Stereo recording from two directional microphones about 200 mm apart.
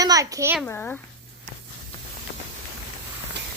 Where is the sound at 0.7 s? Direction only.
10° left (ahead or behind).